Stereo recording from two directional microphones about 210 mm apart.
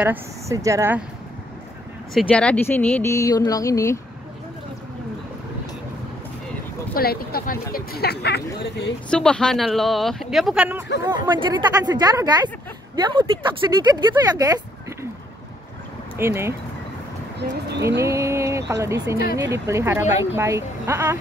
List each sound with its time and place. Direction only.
0.0 s speech: 10° right (ahead or behind)
2.1 s speech: 5° left (ahead or behind)
6.9 s speech: 45° left (ahead or behind)
9.1 s speech: 5° left (ahead or behind)
11.2 s speech: 20° right (ahead or behind)
16.2 s speech: 10° right (ahead or behind)
17.4 s speech: 50° right (ahead or behind)
17.8 s speech: 15° right (ahead or behind)